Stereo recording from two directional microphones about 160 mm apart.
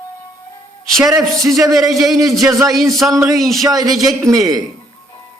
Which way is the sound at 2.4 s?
20° right (ahead or behind).